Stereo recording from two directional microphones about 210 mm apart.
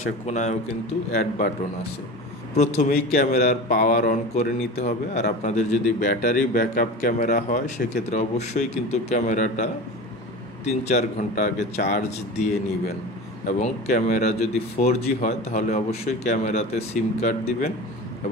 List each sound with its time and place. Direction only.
0.3 s speech: 35° left (ahead or behind)
2.5 s speech: 35° left (ahead or behind)
2.9 s speech: 45° left (ahead or behind)